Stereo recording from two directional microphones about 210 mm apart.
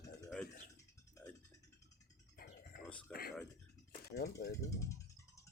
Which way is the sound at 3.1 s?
45° left (ahead or behind).